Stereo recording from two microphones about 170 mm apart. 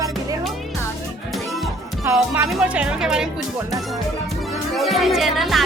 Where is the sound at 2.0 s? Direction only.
15° right (ahead or behind).